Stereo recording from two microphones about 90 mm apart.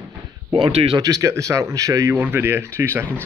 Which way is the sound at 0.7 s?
90° right.